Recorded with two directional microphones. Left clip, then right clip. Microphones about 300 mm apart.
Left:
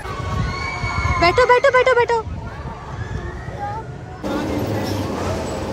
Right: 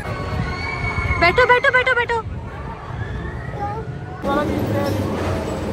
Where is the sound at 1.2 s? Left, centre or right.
Centre.